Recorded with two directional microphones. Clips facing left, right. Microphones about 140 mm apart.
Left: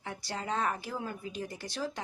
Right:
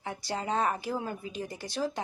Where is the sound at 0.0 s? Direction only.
15° right (ahead or behind).